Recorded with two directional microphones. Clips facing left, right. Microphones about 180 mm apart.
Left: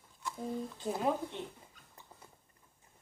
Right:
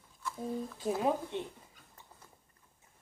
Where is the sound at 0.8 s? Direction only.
15° right (ahead or behind).